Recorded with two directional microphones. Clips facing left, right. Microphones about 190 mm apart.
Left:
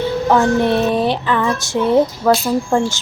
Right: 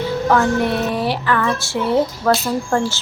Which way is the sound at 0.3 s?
25° left (ahead or behind).